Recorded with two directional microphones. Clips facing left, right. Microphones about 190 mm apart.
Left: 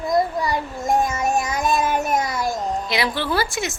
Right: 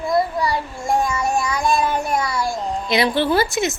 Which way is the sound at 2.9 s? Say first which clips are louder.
Right 8 dB; 25° right (ahead or behind).